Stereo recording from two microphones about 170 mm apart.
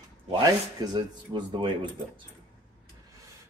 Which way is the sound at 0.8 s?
25° right (ahead or behind).